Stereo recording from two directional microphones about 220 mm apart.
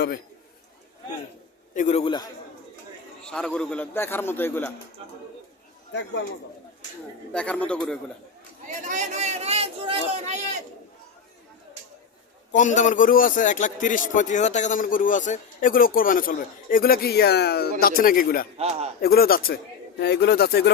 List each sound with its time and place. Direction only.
1.7 s a man's voice: 35° left (ahead or behind)
3.2 s a man's voice: 5° left (ahead or behind)
5.9 s a man's voice: 55° left (ahead or behind)
7.3 s a man's voice: 5° left (ahead or behind)
8.8 s speech: 35° right (ahead or behind)
12.5 s a man's voice: 35° left (ahead or behind)
18.5 s speech: 30° right (ahead or behind)
19.0 s speech: 45° left (ahead or behind)